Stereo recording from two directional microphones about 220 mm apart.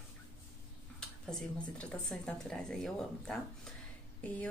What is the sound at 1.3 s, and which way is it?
A woman's voice, 5° left (ahead or behind).